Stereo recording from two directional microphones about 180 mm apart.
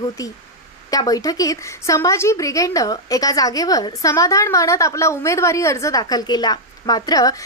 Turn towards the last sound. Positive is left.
turn(degrees=20)  # may be behind; listen again after turning